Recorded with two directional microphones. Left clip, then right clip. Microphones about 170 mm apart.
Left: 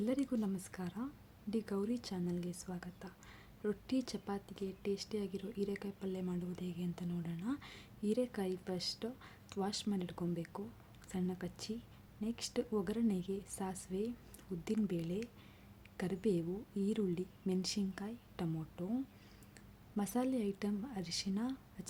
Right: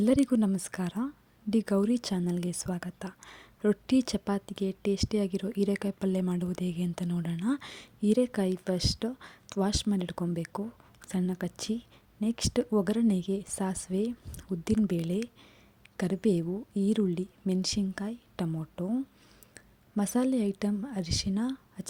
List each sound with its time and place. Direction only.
0.0 s a woman's voice: 45° right (ahead or behind)